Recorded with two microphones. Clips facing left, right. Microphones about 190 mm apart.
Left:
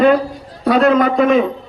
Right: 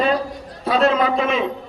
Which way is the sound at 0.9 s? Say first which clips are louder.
Left 7 dB; 50° left (ahead or behind).